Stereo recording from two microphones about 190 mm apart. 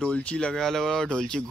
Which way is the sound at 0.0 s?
5° left (ahead or behind).